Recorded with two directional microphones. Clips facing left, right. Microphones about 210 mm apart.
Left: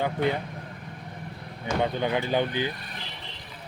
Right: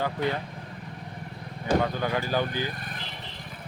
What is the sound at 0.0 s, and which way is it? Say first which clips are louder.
Speech: left 2 dB; 20° left (ahead or behind).